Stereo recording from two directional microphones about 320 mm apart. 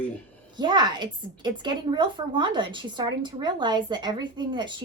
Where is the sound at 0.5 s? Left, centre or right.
Centre.